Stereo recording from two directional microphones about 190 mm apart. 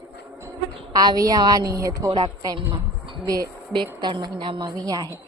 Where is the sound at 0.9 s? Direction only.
20° right (ahead or behind).